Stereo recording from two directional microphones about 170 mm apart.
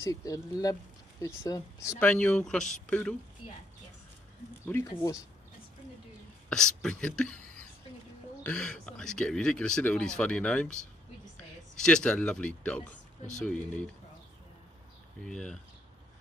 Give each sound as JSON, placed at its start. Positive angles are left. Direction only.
{"t": 0.0, "sound": "speech", "side_deg": 20}
{"t": 2.0, "sound": "speech", "side_deg": 5}
{"t": 4.6, "sound": "speech", "side_deg": 15}
{"t": 6.5, "sound": "speech", "side_deg": 5}
{"t": 8.5, "sound": "speech", "side_deg": 5}
{"t": 11.8, "sound": "speech", "side_deg": 5}
{"t": 15.2, "sound": "speech", "side_deg": 5}